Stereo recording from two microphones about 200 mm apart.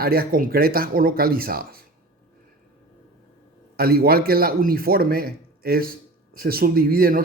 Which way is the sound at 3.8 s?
50° right (ahead or behind).